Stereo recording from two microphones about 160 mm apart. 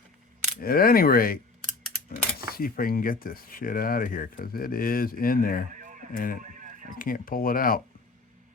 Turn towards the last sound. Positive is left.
turn(degrees=65)  # may be behind; listen again after turning